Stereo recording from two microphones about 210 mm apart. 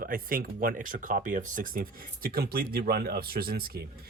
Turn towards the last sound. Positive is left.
turn(degrees=-45)  # may be behind; listen again after turning